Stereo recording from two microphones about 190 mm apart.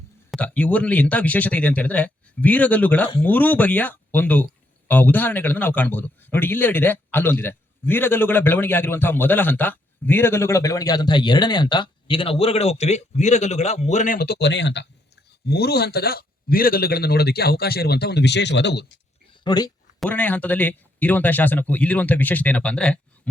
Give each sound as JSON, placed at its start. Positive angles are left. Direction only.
{"t": 0.3, "sound": "a man's voice", "side_deg": 5}
{"t": 19.3, "sound": "a sound", "side_deg": 20}
{"t": 20.0, "sound": "speech", "side_deg": 10}